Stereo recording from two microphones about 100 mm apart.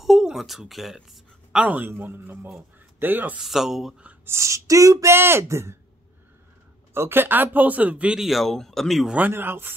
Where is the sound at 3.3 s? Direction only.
5° right (ahead or behind).